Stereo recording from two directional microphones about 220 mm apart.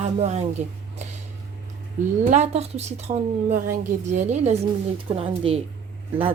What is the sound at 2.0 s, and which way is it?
A woman's voice, 35° right (ahead or behind).